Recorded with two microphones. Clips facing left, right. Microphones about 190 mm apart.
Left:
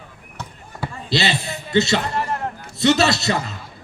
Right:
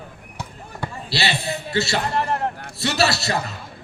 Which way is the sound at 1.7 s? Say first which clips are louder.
Left 5 dB; 20° left (ahead or behind).